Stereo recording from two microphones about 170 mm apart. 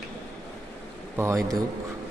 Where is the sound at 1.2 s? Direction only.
20° right (ahead or behind).